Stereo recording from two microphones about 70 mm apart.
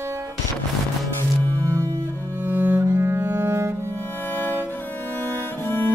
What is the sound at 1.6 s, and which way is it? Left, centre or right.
Cello, right.